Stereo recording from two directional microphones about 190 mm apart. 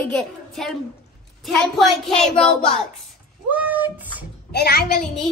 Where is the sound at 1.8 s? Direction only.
Centre (ahead or behind).